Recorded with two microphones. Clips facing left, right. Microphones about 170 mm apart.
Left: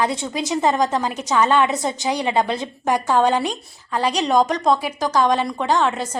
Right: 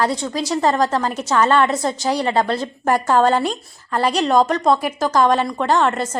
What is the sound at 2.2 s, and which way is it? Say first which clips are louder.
A woman's voice: right 1 dB; 15° left (ahead or behind).